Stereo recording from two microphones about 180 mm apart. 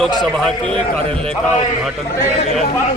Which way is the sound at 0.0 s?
5° left (ahead or behind).